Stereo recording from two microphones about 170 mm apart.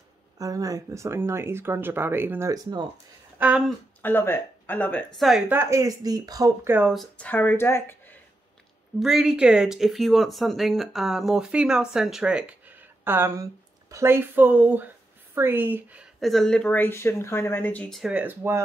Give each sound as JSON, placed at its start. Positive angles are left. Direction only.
{"t": 0.4, "sound": "speech", "side_deg": -20}
{"t": 3.3, "sound": "speech", "side_deg": -5}
{"t": 4.0, "sound": "speech", "side_deg": 10}
{"t": 5.5, "sound": "speech", "side_deg": -15}
{"t": 6.9, "sound": "speech", "side_deg": 5}
{"t": 9.0, "sound": "speech", "side_deg": -5}